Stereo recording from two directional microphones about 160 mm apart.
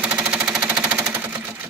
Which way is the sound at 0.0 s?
10° right (ahead or behind).